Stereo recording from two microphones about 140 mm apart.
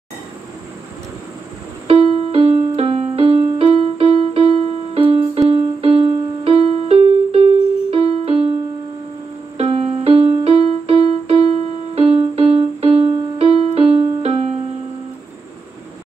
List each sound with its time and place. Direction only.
1.9 s music: 45° right (ahead or behind)
9.6 s music: 45° right (ahead or behind)